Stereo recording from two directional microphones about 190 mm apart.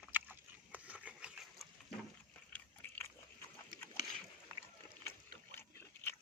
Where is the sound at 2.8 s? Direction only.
10° left (ahead or behind).